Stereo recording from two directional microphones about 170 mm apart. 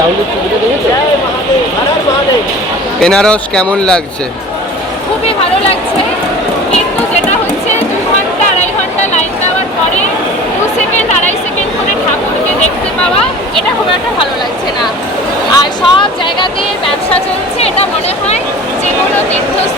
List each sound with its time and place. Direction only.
3.0 s speech: 5° left (ahead or behind)
11.1 s a sound: 40° left (ahead or behind)
15.5 s speech: 30° left (ahead or behind)